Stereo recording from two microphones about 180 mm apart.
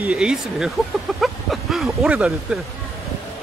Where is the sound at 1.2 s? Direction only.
Centre (ahead or behind).